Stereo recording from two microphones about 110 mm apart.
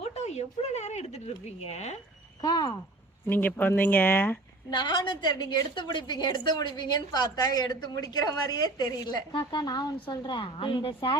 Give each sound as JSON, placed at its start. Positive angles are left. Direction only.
{"t": 0.0, "sound": "a sound", "side_deg": 80}
{"t": 2.4, "sound": "a woman's voice", "side_deg": 40}
{"t": 3.2, "sound": "speech", "side_deg": 15}
{"t": 4.7, "sound": "a woman's voice", "side_deg": 45}